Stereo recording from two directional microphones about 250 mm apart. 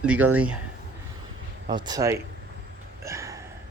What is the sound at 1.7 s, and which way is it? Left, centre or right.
Speech, centre.